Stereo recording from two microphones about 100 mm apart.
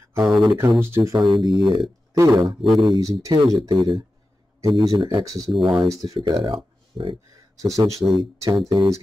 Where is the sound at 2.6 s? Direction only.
Centre (ahead or behind).